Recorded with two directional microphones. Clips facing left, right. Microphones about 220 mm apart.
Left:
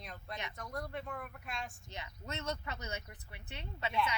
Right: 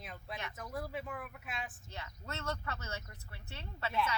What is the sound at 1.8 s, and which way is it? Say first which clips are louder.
Speech: left 1 dB; 20° left (ahead or behind).